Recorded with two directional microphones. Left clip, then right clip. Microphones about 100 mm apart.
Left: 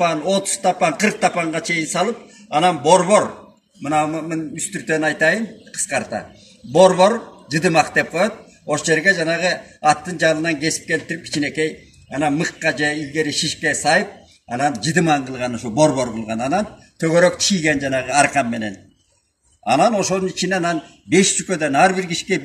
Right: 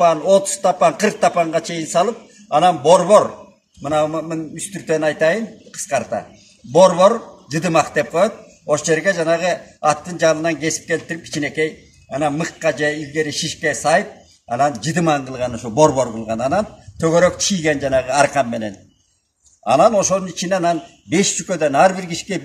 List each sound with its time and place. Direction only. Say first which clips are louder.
0.0 s a man's voice: right 5 dB; 40° right (ahead or behind)